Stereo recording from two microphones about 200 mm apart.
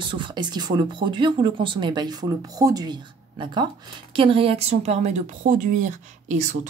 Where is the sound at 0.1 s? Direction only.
25° right (ahead or behind).